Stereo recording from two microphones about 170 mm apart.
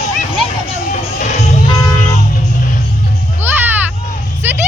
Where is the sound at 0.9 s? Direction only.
45° left (ahead or behind).